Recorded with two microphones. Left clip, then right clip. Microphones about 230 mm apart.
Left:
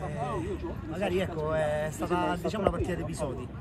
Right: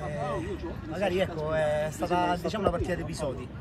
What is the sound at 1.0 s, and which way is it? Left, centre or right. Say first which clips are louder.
Speech: right 2 dB; centre.